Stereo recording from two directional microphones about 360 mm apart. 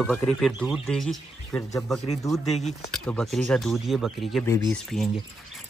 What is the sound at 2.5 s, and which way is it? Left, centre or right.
Speech, centre.